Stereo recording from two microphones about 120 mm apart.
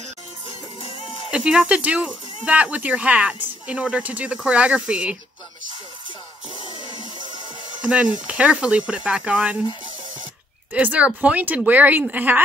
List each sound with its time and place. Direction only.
0.5 s music: 50° left (ahead or behind)
1.3 s speech: 5° right (ahead or behind)
7.8 s speech: 10° right (ahead or behind)
10.7 s speech: 10° right (ahead or behind)